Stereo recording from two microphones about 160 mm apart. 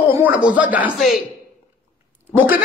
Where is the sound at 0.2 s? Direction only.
10° right (ahead or behind).